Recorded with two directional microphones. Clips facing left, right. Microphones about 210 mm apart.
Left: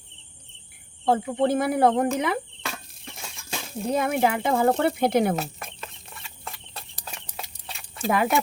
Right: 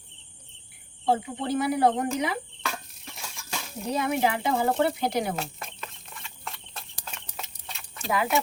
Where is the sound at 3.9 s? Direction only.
50° left (ahead or behind).